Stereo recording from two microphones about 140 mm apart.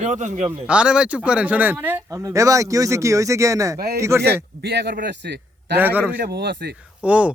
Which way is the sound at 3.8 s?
90° right.